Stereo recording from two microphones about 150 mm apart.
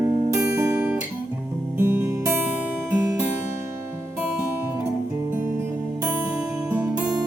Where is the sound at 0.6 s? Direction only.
15° right (ahead or behind).